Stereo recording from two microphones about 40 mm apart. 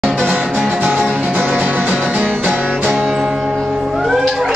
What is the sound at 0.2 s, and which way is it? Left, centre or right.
Music, right.